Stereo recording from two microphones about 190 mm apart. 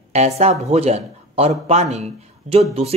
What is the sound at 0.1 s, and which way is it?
A man's voice, 35° right (ahead or behind).